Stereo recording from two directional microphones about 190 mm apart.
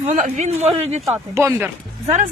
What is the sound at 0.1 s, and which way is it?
Speech, 40° right (ahead or behind).